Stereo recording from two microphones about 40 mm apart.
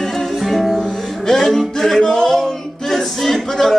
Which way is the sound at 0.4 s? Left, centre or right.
Centre.